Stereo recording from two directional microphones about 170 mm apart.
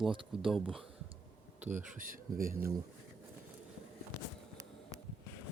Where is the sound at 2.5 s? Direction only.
15° right (ahead or behind).